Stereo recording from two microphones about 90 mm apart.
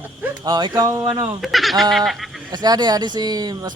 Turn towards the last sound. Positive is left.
turn(degrees=-45)  # may be behind; listen again after turning